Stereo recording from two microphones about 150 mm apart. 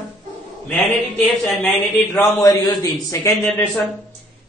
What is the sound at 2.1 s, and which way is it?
A man's voice, 25° left (ahead or behind).